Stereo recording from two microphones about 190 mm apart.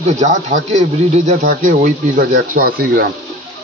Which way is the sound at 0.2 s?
35° right (ahead or behind).